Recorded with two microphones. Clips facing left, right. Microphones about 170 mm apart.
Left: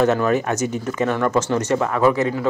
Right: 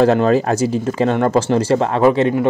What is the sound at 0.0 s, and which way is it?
Speech, 30° right (ahead or behind).